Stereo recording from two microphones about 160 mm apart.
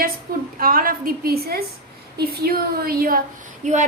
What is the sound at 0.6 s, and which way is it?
A woman's voice, 60° right (ahead or behind).